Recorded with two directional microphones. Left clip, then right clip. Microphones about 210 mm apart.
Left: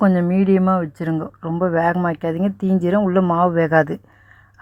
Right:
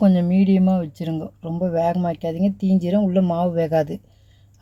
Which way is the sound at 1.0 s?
Centre (ahead or behind).